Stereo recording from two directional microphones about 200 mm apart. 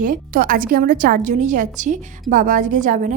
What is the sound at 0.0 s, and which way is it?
A woman's voice, 45° right (ahead or behind).